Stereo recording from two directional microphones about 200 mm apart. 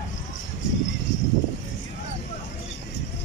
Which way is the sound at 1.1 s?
65° left (ahead or behind).